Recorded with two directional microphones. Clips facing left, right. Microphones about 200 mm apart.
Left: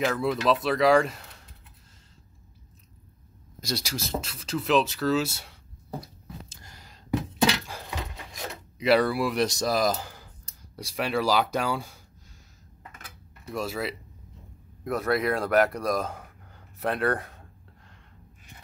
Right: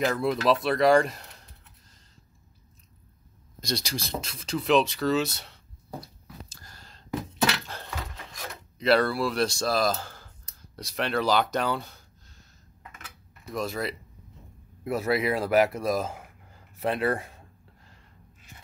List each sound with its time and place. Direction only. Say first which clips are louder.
0.0 s speech: even; centre (ahead or behind)
3.6 s speech: even; 5° left (ahead or behind)
6.2 s a sound: left 2 dB; 20° left (ahead or behind)
8.7 s speech: left 1 dB; 10° left (ahead or behind)
13.5 s speech: even; 5° left (ahead or behind)